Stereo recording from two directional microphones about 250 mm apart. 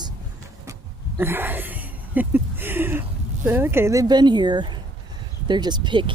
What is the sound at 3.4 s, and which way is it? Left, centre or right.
Speech, centre.